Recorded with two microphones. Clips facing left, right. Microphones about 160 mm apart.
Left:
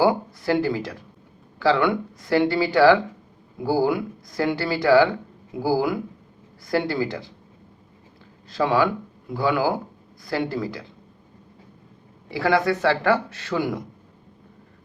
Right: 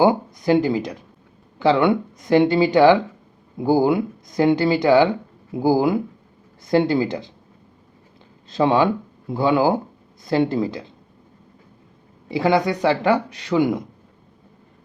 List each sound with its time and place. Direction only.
0.0 s speech: 20° right (ahead or behind)
8.4 s speech: 20° right (ahead or behind)
12.3 s speech: 20° right (ahead or behind)